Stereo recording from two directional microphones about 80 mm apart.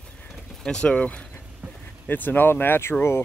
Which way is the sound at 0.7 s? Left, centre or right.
Centre.